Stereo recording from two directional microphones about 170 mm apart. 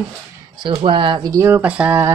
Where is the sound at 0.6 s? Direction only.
30° right (ahead or behind); by 2.1 s 10° right (ahead or behind).